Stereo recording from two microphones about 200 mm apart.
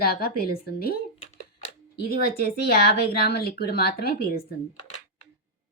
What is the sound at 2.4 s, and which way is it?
A woman's voice, 50° left (ahead or behind).